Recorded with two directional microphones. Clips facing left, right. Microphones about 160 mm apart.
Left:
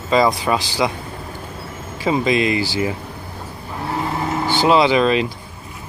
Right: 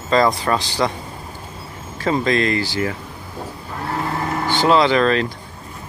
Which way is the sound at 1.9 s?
10° left (ahead or behind).